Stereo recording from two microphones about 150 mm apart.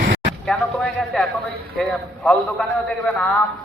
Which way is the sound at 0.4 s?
5° left (ahead or behind).